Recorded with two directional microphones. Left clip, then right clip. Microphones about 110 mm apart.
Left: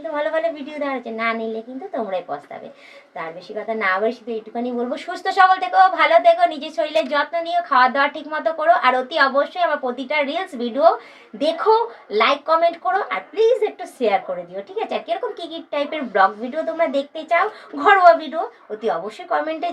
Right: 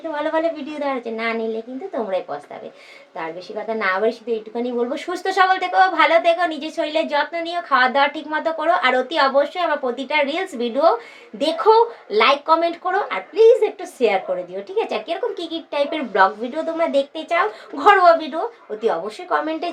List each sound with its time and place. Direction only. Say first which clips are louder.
0.3 s speech: right 1 dB; 50° right (ahead or behind)
3.7 s speech: even; 45° right (ahead or behind)